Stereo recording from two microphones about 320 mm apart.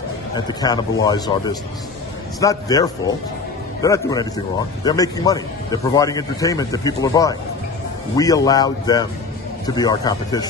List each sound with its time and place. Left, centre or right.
0.5 s a man's voice: centre